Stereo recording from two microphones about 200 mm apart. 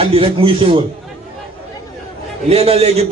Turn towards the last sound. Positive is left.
turn(degrees=-30)  # may be behind; listen again after turning